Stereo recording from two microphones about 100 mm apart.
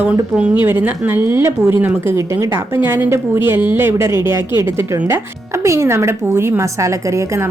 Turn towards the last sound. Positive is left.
turn(degrees=-30)  # may be behind; listen again after turning